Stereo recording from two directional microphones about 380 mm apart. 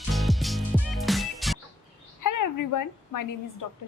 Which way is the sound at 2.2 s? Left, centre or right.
Left.